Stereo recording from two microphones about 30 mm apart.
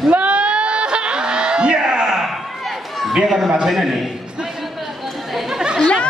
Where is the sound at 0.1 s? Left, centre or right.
Right.